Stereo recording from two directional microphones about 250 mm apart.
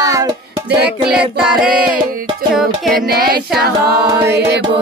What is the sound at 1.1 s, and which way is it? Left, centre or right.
Music, centre.